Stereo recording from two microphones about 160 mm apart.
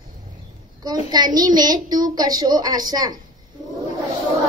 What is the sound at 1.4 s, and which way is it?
Child singing, 25° right (ahead or behind).